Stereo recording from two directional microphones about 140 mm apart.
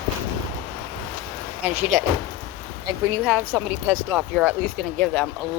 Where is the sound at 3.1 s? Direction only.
10° right (ahead or behind).